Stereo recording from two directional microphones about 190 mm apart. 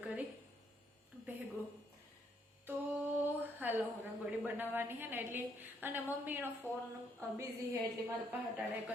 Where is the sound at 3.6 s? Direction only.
10° right (ahead or behind).